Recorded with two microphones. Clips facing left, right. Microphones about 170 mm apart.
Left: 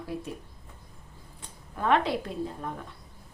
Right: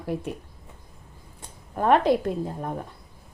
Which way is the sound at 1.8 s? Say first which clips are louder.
Right 5 dB; 45° right (ahead or behind).